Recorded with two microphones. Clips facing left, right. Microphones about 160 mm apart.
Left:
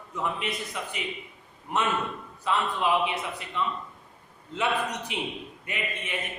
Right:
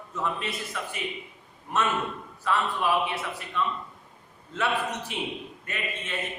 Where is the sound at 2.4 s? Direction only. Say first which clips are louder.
Even; 20° left (ahead or behind).